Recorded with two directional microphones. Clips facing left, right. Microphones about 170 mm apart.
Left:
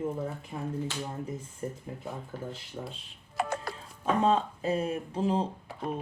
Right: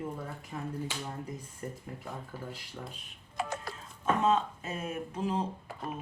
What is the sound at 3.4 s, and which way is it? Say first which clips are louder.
Music: left 4 dB; 60° left (ahead or behind).